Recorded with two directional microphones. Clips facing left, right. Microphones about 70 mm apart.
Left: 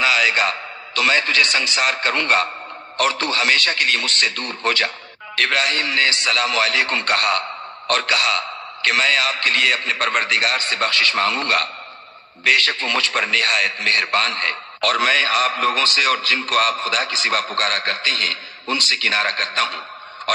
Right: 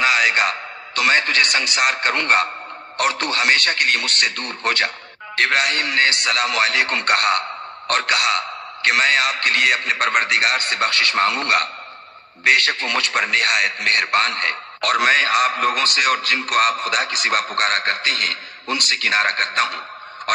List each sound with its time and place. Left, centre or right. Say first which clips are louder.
0.0 s a man's voice: right 1 dB; right